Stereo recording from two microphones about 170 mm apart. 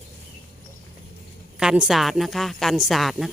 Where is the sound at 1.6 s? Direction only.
5° right (ahead or behind).